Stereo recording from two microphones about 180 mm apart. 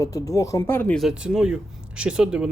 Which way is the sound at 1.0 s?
5° right (ahead or behind).